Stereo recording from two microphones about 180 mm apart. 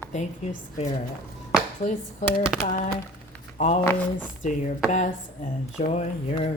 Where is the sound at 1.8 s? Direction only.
40° left (ahead or behind).